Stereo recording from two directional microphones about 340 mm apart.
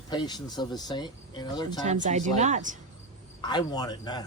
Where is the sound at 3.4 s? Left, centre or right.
Centre.